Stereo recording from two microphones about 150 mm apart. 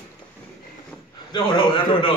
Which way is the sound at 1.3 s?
30° left (ahead or behind).